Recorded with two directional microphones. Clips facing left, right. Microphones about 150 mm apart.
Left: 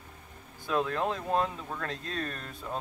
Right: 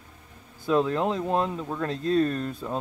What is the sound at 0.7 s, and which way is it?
Speech, 20° right (ahead or behind).